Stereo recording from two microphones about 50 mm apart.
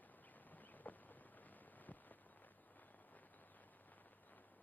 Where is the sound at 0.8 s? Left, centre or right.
Left.